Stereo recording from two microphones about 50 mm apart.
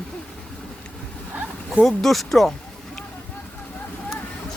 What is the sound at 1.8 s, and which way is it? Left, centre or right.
Speech, centre.